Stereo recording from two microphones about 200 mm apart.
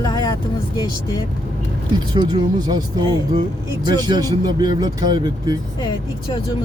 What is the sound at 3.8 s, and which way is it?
Speech, 20° right (ahead or behind).